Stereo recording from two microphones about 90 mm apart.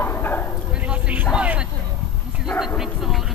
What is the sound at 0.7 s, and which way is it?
Bow-wow, 15° right (ahead or behind).